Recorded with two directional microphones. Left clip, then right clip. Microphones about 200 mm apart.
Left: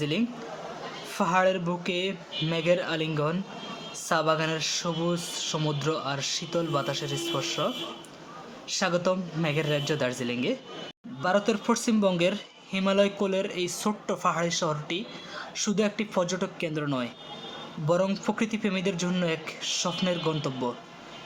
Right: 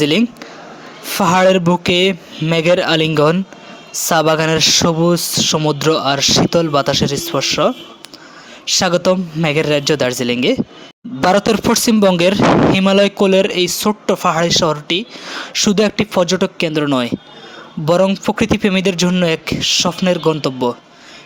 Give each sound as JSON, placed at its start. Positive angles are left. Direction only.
{"t": 0.0, "sound": "speech", "side_deg": -50}